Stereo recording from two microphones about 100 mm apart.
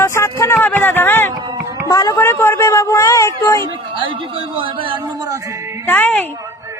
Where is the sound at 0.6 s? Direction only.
20° left (ahead or behind).